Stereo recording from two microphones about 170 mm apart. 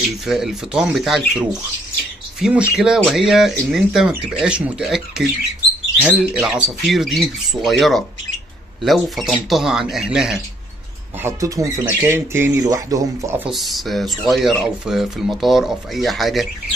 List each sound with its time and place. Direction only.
0.3 s speech: 5° right (ahead or behind)
11.2 s speech: 20° right (ahead or behind)
13.4 s speech: centre (ahead or behind)